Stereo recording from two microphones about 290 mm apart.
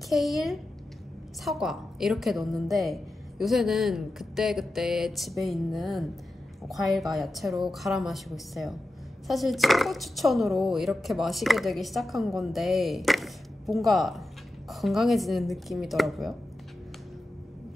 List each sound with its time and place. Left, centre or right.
0.1 s speech: centre